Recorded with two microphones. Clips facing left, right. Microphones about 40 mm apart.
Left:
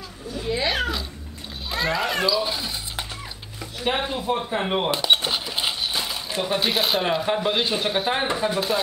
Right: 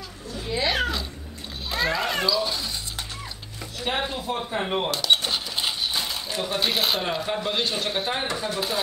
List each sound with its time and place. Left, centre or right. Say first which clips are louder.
0.3 s a sound: left 1 dB; centre
1.7 s cat: left 1 dB; centre
3.8 s cash register: left 3 dB; centre
6.3 s speech: left 4 dB; centre
6.6 s speech: left 1 dB; centre